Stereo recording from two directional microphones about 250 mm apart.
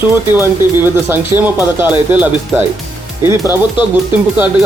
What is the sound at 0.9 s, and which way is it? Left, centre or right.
Speech, centre.